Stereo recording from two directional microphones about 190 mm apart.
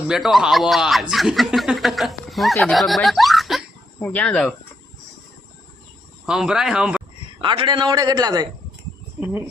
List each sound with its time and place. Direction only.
0.1 s speech: centre (ahead or behind)
6.2 s speech: 5° right (ahead or behind)
7.4 s a man's voice: 25° right (ahead or behind)